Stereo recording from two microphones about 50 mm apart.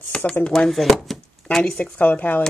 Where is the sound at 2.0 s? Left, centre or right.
Left.